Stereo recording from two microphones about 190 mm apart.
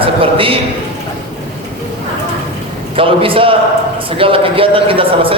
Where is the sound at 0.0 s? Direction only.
30° right (ahead or behind).